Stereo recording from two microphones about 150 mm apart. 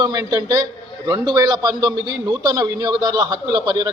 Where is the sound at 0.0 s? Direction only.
25° right (ahead or behind).